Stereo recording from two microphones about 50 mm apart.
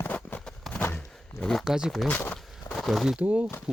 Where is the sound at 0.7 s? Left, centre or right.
Left.